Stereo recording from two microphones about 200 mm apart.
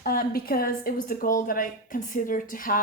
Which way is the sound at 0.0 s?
45° left (ahead or behind).